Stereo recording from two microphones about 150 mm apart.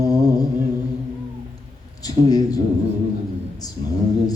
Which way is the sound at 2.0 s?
25° left (ahead or behind).